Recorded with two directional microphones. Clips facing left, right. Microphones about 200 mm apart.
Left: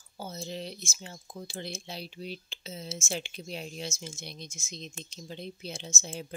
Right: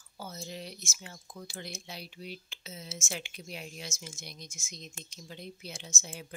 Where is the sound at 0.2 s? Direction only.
25° left (ahead or behind).